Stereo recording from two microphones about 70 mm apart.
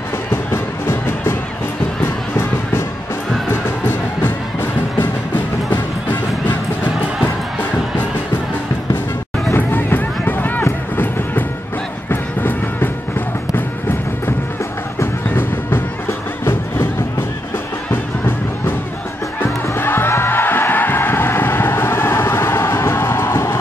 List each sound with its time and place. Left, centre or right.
0.3 s music: left
3.6 s music: left
9.6 s music: left
12.1 s music: left
15.2 s music: left
17.9 s music: left